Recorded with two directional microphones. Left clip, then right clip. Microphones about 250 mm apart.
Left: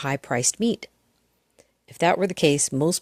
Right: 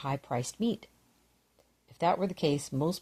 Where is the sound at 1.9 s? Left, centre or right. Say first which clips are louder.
Left 8 dB; left.